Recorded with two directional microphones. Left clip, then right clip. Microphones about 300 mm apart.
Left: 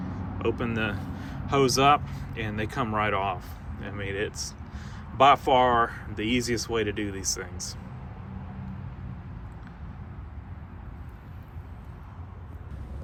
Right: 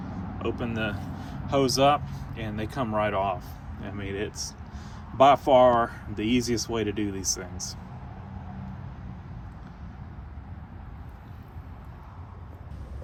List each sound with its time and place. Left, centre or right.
0.1 s speech: centre